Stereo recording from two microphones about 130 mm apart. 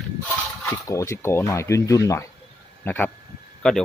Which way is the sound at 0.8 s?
20° left (ahead or behind).